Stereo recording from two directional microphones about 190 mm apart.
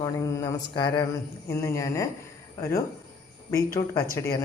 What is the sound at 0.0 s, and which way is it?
A woman's voice, 20° left (ahead or behind).